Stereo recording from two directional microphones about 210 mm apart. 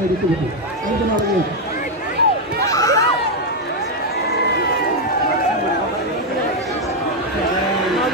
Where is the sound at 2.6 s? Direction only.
15° left (ahead or behind).